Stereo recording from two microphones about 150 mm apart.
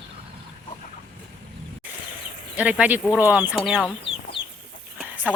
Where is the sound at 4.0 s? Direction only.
35° left (ahead or behind).